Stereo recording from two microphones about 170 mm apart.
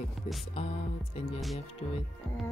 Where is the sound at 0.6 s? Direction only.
35° left (ahead or behind).